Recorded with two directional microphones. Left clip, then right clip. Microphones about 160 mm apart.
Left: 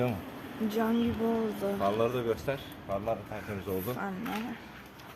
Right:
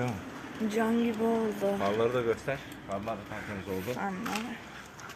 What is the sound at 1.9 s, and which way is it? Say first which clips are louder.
Speech: right 1 dB; 10° left (ahead or behind).